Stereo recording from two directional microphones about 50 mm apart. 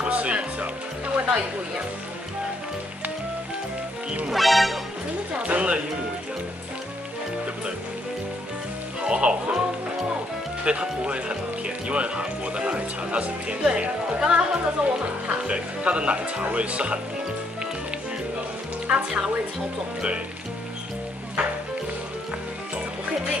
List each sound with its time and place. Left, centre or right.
0.0 s music: right
1.1 s speech: right
4.3 s music: centre
5.3 s speech: right
9.0 s speech: centre
10.6 s speech: right
18.9 s speech: right